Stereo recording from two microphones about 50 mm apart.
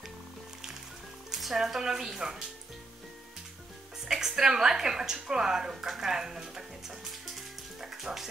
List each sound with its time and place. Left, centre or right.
1.3 s speech: centre
4.0 s a woman's voice: centre